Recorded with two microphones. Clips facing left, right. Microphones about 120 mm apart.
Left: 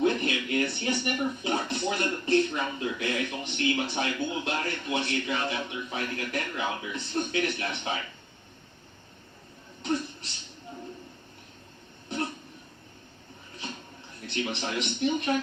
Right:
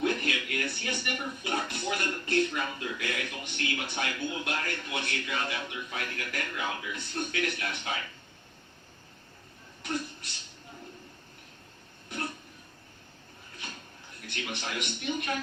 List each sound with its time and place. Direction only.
0.0 s speech: 25° left (ahead or behind)
9.8 s a sound: 25° left (ahead or behind)
12.0 s throat clearing: 25° left (ahead or behind)
14.2 s speech: 25° left (ahead or behind)